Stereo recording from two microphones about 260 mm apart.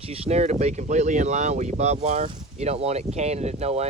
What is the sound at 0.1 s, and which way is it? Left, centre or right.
Speech, right.